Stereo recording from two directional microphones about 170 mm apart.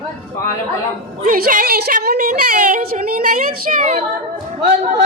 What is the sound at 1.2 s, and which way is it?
A woman's voice, 55° right (ahead or behind).